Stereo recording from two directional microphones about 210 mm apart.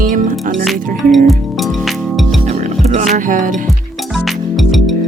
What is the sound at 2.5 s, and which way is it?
Music, 30° right (ahead or behind).